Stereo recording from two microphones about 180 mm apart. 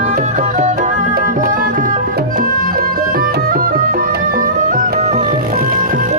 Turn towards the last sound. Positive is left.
turn(degrees=-50)  # may be behind; listen again after turning